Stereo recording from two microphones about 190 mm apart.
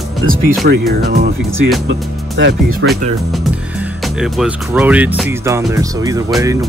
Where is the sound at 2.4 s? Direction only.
60° right (ahead or behind).